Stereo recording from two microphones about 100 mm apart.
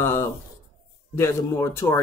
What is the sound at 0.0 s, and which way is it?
Speech, 25° left (ahead or behind).